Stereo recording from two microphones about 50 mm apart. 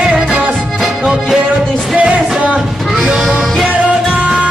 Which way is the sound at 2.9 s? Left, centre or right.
Centre.